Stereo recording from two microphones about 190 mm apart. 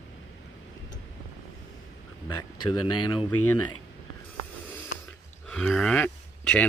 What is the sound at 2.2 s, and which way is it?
Speech, 25° left (ahead or behind).